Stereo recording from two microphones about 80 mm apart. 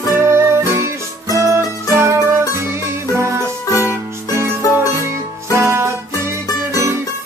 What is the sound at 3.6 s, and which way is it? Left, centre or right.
Music, left.